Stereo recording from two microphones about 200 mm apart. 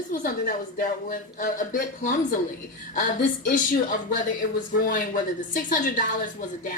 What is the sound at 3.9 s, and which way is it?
Speech, 40° left (ahead or behind).